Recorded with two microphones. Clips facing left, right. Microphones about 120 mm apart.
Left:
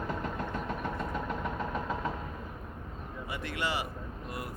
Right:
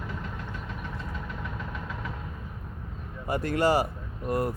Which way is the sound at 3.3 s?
40° right (ahead or behind).